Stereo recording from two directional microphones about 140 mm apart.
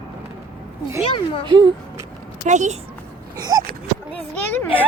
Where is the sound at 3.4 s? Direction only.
25° right (ahead or behind).